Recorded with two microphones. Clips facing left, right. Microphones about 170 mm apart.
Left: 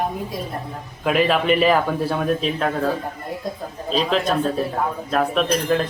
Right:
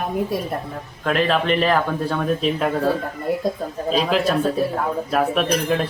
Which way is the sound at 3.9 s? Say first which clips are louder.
Right 1 dB; 5° right (ahead or behind).